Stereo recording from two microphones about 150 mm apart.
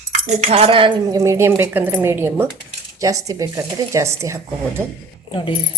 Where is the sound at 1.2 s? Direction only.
20° right (ahead or behind).